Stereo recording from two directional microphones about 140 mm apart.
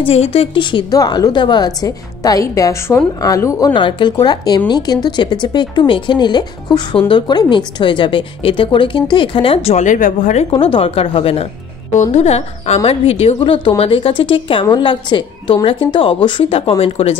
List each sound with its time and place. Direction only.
0.0 s a woman's voice: 45° left (ahead or behind)
9.8 s speech: 70° left (ahead or behind)
10.5 s a woman's voice: 40° left (ahead or behind)
11.9 s a woman's voice: 55° left (ahead or behind)